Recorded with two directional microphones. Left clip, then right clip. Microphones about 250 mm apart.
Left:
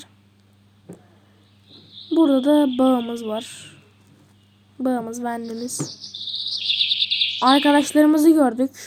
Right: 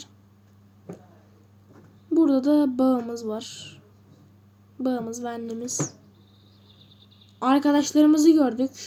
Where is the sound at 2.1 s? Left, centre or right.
Centre.